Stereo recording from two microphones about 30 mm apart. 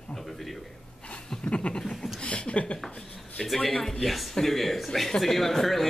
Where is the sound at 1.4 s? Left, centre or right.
Left.